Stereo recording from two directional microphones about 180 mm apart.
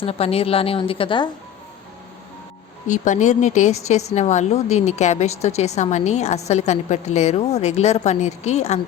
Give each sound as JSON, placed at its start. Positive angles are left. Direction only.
{"t": 0.0, "sound": "a woman's voice", "side_deg": 35}
{"t": 2.8, "sound": "a woman's voice", "side_deg": 45}